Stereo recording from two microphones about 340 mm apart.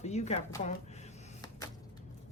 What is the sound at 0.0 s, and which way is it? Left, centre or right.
Speech, centre.